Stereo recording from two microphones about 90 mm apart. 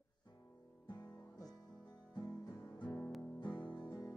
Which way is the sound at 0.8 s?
55° left (ahead or behind).